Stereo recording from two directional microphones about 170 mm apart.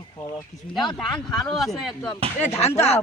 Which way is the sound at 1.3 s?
Centre (ahead or behind).